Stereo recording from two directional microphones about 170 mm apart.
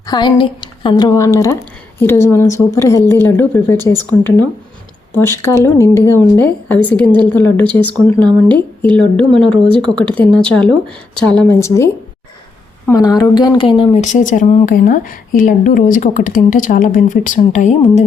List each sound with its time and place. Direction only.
0.1 s a woman's voice: 25° left (ahead or behind)
12.9 s a woman's voice: 20° left (ahead or behind)
14.0 s speech: 45° left (ahead or behind)